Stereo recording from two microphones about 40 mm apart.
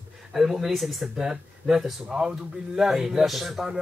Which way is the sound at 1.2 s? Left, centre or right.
Centre.